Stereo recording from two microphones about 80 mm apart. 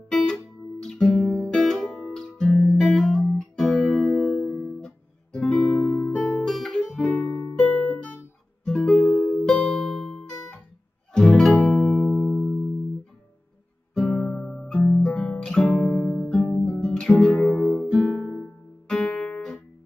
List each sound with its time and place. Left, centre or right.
0.1 s guitar: centre
1.4 s music: centre
4.7 s guitar: centre
6.4 s guitar: centre
7.2 s music: centre
9.0 s music: centre
14.0 s music: centre
18.9 s guitar: centre